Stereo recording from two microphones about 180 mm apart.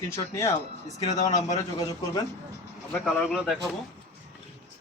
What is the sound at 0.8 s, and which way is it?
Speech, 40° left (ahead or behind).